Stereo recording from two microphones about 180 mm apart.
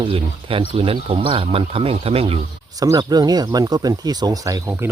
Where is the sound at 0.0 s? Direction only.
30° right (ahead or behind).